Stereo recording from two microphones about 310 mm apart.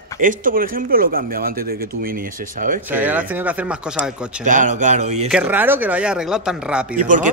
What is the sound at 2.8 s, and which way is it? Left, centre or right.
Speech, centre.